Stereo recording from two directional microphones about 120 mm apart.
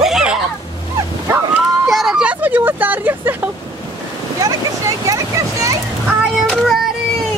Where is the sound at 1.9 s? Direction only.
Centre (ahead or behind).